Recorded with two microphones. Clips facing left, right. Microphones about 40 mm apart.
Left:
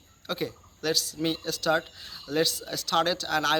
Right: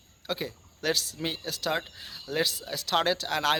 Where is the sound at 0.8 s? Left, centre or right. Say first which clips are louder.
Even; right.